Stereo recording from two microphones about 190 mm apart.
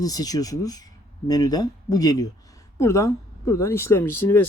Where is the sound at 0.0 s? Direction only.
20° left (ahead or behind).